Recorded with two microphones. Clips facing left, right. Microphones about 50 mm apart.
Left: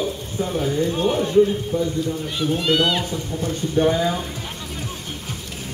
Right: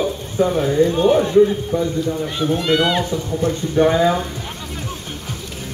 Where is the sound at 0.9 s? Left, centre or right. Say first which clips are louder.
Right 6 dB; centre.